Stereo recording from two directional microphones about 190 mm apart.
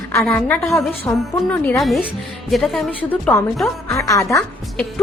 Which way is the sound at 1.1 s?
15° left (ahead or behind).